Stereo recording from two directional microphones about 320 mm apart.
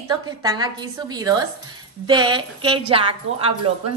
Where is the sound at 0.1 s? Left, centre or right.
Centre.